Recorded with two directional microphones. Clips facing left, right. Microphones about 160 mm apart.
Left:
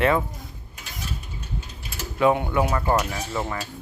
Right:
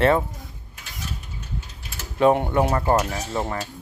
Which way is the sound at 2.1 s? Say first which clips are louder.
Right 2 dB; 35° right (ahead or behind).